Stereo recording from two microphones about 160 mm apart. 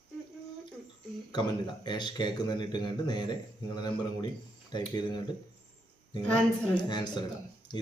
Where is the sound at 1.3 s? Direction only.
30° left (ahead or behind).